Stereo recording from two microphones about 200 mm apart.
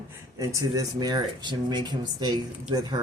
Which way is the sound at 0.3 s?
15° right (ahead or behind).